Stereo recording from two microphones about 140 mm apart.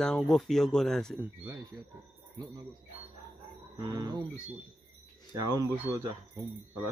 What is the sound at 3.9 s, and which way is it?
Speech, 25° right (ahead or behind).